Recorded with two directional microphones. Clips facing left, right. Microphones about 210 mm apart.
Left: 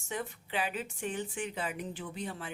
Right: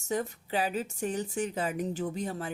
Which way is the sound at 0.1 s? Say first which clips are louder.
Right 6 dB; 40° right (ahead or behind).